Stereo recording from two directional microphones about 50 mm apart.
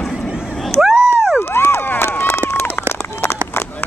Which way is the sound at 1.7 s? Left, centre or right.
Left.